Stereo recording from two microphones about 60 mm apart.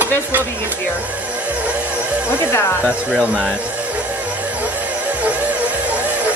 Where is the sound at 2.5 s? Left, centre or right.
Left.